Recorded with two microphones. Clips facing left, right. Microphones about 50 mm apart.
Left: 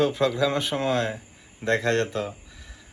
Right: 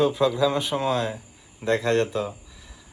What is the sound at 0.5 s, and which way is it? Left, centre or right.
Speech, left.